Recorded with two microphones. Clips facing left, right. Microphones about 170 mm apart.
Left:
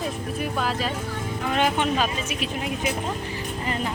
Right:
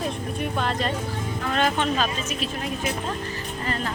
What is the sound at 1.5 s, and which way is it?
Speech, 15° left (ahead or behind).